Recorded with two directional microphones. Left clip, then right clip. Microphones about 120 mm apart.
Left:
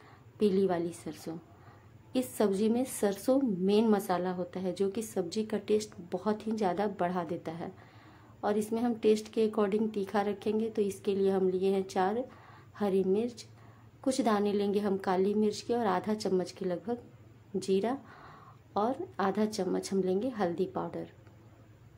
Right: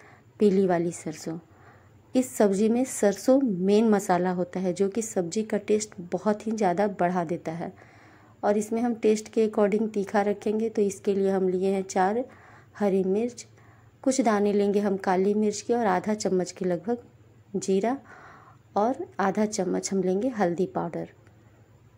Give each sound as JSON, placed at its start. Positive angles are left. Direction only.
{"t": 0.4, "sound": "a woman's voice", "side_deg": -40}